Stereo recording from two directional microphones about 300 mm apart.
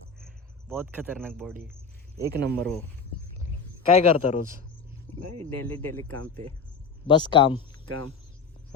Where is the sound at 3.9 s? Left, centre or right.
Left.